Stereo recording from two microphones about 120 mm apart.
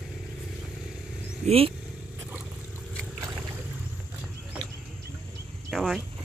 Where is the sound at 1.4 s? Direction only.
55° right (ahead or behind).